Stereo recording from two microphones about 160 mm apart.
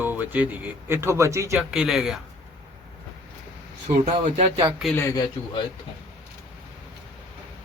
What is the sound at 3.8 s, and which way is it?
Speech, 45° right (ahead or behind).